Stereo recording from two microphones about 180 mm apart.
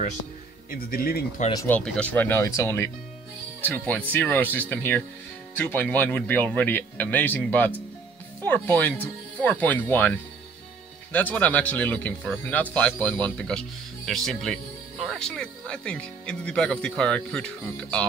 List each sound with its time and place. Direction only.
0.7 s speech: 55° left (ahead or behind)
1.5 s speech: 20° left (ahead or behind)
1.8 s speech: 5° left (ahead or behind)